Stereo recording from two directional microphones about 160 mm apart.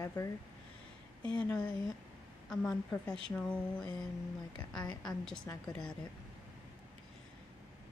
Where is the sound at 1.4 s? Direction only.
5° left (ahead or behind).